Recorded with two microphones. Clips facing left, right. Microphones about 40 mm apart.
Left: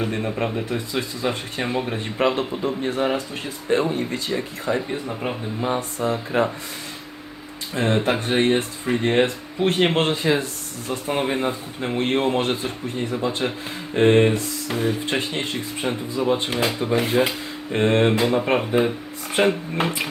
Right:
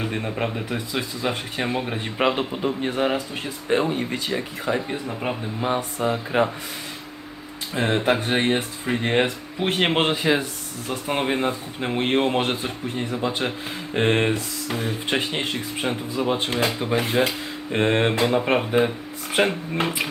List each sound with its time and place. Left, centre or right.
0.0 s a man's voice: centre
2.4 s a man's voice: centre
6.0 s speech: right
7.8 s a man's voice: centre
13.9 s a sound: centre
16.2 s a man's voice: centre
16.6 s a sound: centre
17.7 s a man's voice: centre
19.3 s a sound: centre